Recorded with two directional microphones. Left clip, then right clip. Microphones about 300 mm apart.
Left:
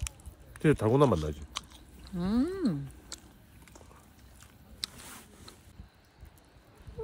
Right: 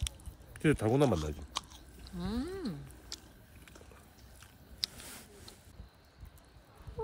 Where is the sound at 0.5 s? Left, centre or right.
Centre.